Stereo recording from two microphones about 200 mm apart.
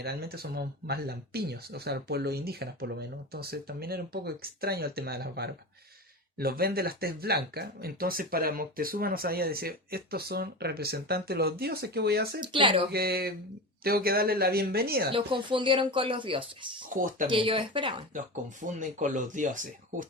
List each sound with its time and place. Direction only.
0.0 s speech: 50° right (ahead or behind)
12.5 s speech: 25° right (ahead or behind)
12.9 s speech: 50° right (ahead or behind)
15.1 s speech: 25° right (ahead or behind)
16.9 s speech: 40° right (ahead or behind)
17.2 s speech: 25° right (ahead or behind)
18.8 s speech: 40° right (ahead or behind)